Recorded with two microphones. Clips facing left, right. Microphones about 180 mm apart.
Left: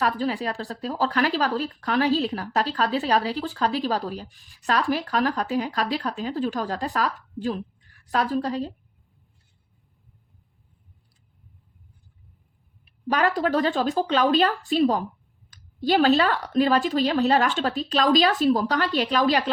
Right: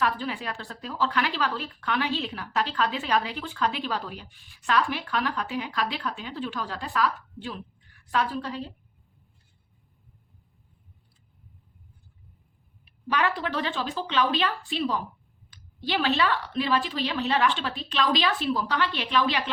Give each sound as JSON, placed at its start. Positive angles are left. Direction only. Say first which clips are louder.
{"t": 0.0, "sound": "a woman's voice", "louder": "left 4 dB", "side_deg": 40}
{"t": 13.1, "sound": "a woman's voice", "louder": "left 5 dB", "side_deg": 40}